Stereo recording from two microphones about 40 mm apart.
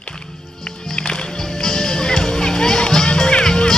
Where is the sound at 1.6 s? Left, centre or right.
Centre.